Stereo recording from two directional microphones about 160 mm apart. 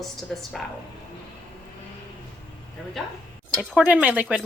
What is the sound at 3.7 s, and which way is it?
Speech, 5° right (ahead or behind).